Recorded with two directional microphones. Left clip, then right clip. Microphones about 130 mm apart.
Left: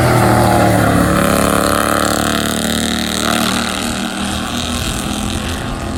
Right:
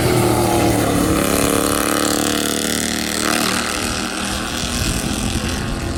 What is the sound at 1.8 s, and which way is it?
Burping, centre (ahead or behind).